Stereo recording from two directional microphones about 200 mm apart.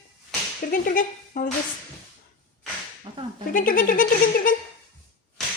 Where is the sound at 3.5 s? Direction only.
45° left (ahead or behind).